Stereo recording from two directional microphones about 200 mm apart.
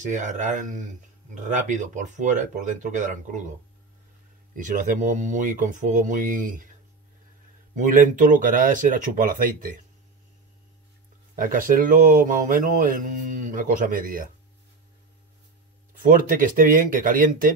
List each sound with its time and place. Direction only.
0.0 s speech: 40° right (ahead or behind)
4.6 s speech: 40° right (ahead or behind)
7.7 s speech: 40° right (ahead or behind)
11.3 s speech: 45° right (ahead or behind)
16.0 s speech: 45° right (ahead or behind)